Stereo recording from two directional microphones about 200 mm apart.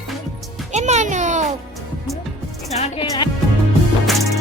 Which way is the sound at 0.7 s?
35° right (ahead or behind).